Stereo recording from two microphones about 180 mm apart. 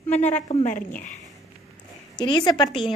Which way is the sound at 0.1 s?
40° left (ahead or behind).